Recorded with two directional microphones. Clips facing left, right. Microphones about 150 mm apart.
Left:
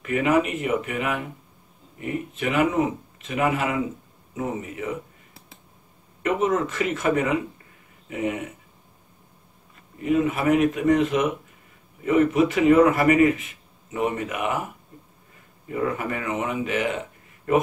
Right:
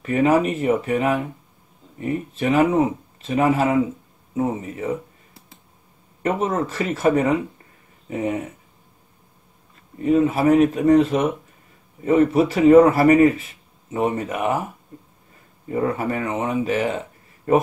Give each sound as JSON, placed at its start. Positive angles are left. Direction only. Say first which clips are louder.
{"t": 0.0, "sound": "speech", "louder": "right 3 dB", "side_deg": -35}
{"t": 6.2, "sound": "speech", "louder": "even", "side_deg": -35}
{"t": 10.0, "sound": "speech", "louder": "right 4 dB", "side_deg": -30}
{"t": 15.7, "sound": "speech", "louder": "right 4 dB", "side_deg": -35}